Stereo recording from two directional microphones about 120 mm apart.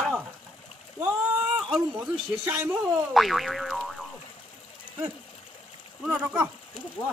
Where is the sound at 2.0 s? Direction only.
20° right (ahead or behind).